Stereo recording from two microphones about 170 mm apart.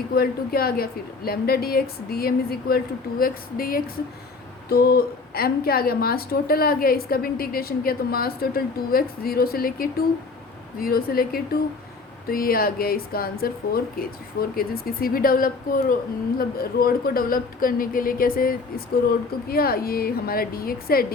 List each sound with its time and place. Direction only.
0.1 s a woman's voice: 65° left (ahead or behind)